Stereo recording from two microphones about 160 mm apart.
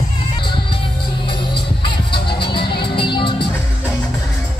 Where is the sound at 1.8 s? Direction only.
30° left (ahead or behind).